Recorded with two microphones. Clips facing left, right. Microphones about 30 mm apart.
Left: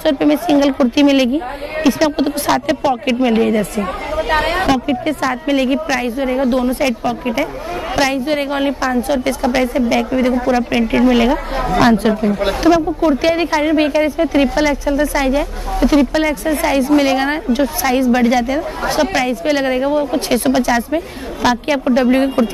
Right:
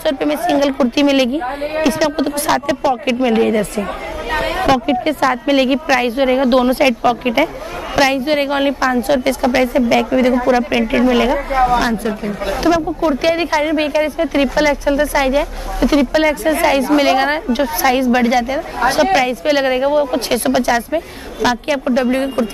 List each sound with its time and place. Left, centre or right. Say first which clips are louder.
0.0 s speech: left 2 dB; centre
4.3 s a woman's voice: left 2 dB; left
4.6 s a woman's voice: right 2 dB; right
6.5 s speech: right 3 dB; right
6.8 s a woman's voice: right 3 dB; right
7.9 s a woman's voice: right 2 dB; centre
12.6 s a woman's voice: left 2 dB; centre